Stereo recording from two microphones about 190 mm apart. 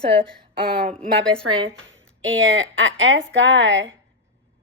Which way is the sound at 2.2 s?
85° right.